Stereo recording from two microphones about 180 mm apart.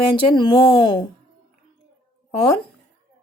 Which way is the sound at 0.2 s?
25° left (ahead or behind).